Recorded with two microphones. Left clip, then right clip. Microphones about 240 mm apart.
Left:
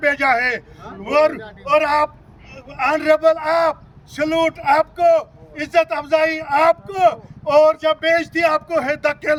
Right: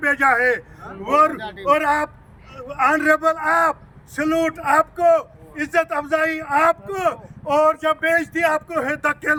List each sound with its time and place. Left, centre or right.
0.0 s a man's voice: centre
1.4 s a man's voice: right
1.6 s a man's voice: centre